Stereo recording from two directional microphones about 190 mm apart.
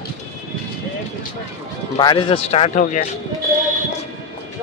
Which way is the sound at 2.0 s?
25° left (ahead or behind).